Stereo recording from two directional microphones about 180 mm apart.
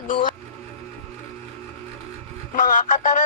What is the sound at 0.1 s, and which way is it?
Speech, 45° left (ahead or behind).